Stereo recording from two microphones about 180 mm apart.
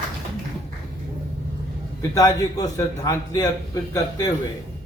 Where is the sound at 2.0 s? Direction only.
20° left (ahead or behind).